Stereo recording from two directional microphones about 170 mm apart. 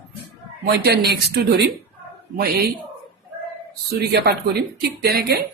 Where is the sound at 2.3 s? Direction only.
65° right (ahead or behind).